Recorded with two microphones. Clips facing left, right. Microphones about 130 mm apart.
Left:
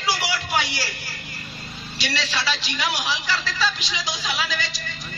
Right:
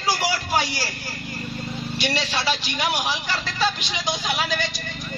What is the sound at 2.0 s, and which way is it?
A woman's voice, 50° right (ahead or behind).